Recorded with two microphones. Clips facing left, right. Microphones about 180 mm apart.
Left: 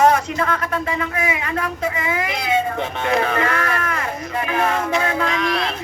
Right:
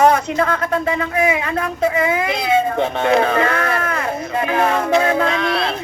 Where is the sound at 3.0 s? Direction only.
30° right (ahead or behind).